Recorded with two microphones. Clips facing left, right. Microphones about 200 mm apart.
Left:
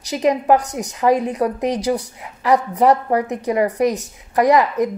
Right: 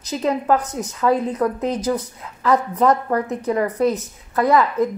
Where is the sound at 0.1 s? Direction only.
15° left (ahead or behind).